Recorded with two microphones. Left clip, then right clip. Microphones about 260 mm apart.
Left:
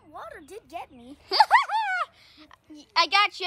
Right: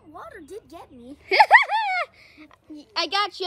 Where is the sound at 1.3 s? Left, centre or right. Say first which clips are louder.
Right 4 dB; centre.